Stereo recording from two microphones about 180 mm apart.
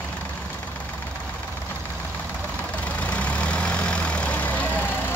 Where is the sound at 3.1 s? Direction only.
5° left (ahead or behind).